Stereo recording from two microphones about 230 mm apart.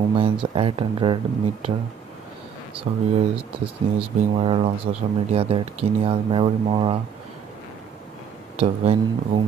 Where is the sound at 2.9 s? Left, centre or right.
Right.